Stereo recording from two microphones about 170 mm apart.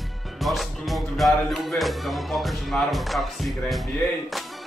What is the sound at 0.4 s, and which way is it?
Speech, centre (ahead or behind).